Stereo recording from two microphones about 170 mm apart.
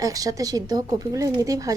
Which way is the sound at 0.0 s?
20° right (ahead or behind).